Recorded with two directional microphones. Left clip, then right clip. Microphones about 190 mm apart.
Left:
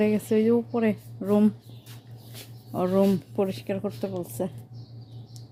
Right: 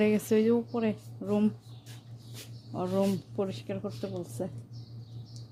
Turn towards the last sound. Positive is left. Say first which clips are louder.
# left 6 dB
turn(degrees=20)  # may be behind; listen again after turning